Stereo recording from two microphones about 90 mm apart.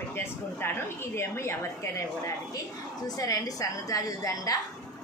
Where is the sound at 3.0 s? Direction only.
45° left (ahead or behind).